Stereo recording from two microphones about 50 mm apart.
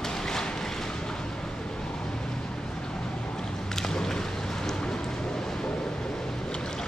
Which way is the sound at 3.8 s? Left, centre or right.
Centre.